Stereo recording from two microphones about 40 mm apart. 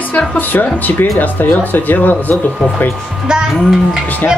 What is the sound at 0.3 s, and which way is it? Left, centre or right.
Speech, left.